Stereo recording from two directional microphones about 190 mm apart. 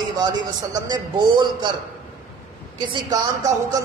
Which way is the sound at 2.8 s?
20° right (ahead or behind).